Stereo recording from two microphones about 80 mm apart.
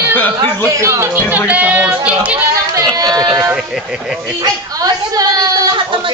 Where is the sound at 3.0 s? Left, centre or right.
Right.